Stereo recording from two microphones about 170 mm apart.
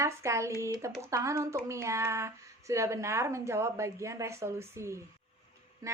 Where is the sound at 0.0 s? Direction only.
15° right (ahead or behind).